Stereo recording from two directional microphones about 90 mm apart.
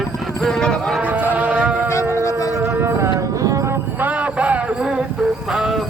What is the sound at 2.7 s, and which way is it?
Music, 25° right (ahead or behind).